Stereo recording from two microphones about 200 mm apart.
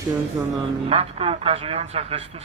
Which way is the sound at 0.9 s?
30° right (ahead or behind).